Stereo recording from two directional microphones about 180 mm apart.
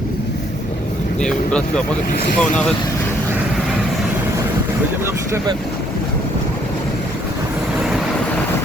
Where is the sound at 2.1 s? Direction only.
60° left (ahead or behind).